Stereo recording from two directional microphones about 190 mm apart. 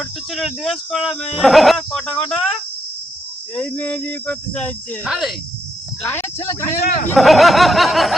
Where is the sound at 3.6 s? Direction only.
10° left (ahead or behind).